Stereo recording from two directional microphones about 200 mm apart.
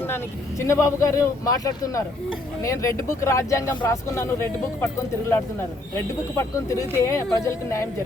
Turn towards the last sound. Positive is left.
turn(degrees=15)  # may be behind; listen again after turning